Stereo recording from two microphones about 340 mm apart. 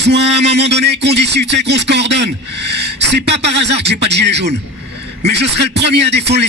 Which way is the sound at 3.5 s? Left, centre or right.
Right.